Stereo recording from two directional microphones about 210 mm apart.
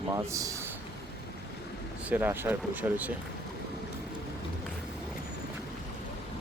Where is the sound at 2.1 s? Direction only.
10° right (ahead or behind).